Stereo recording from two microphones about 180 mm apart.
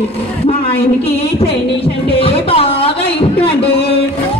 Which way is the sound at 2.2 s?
30° left (ahead or behind).